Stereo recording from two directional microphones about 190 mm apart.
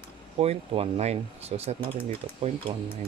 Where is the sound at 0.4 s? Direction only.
35° right (ahead or behind).